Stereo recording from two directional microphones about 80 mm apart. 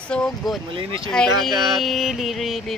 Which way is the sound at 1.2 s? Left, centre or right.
Centre.